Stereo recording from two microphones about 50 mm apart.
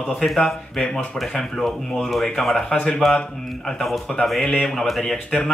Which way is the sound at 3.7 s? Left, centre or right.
Centre.